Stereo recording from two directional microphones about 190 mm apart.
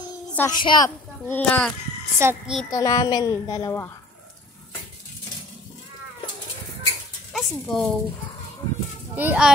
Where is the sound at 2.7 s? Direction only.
15° left (ahead or behind).